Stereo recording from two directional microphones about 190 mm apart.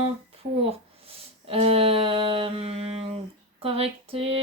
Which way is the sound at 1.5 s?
30° right (ahead or behind).